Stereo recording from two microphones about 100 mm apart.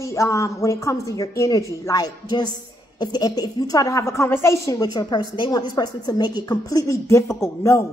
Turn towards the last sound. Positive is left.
turn(degrees=25)  # may be behind; listen again after turning